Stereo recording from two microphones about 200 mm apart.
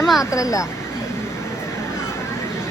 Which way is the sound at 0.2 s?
15° left (ahead or behind).